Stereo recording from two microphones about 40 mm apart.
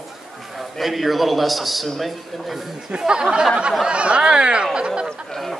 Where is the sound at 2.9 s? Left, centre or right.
Right.